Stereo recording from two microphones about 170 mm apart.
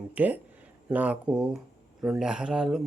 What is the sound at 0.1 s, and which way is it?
Speech, 10° right (ahead or behind).